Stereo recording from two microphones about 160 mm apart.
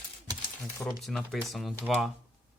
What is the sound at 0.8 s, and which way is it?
Speech, centre (ahead or behind).